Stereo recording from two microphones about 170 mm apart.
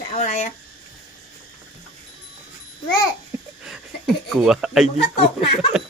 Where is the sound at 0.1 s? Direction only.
40° left (ahead or behind).